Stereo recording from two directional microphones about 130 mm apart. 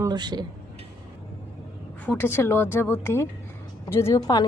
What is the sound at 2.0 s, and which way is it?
A woman's voice, 15° left (ahead or behind).